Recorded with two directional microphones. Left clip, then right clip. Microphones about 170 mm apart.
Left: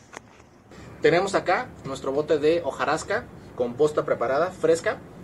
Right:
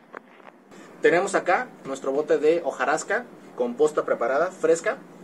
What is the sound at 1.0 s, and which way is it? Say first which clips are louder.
Speech: even; centre (ahead or behind).